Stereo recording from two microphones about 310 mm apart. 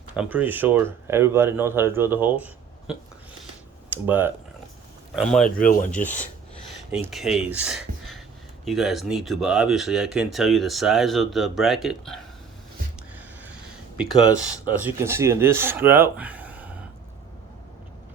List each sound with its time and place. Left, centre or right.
0.1 s speech: centre
5.4 s speech: left
6.9 s speech: centre
13.9 s speech: centre